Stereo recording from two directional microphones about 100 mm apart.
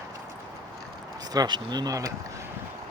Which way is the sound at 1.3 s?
45° right (ahead or behind).